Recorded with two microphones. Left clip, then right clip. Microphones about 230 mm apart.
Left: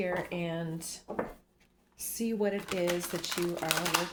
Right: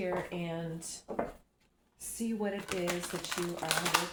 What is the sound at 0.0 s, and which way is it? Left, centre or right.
Speech, left.